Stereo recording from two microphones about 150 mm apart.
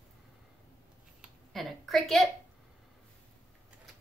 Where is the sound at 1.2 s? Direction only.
Centre (ahead or behind).